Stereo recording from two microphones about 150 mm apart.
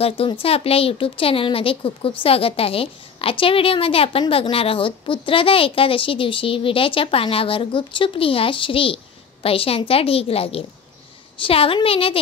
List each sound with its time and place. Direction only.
0.0 s speech: 40° left (ahead or behind)